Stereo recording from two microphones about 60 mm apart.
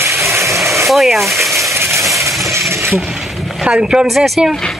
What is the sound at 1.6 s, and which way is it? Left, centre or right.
Coin, right.